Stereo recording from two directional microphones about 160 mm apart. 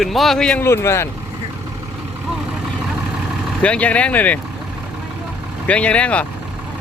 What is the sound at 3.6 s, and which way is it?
Speech, 5° left (ahead or behind).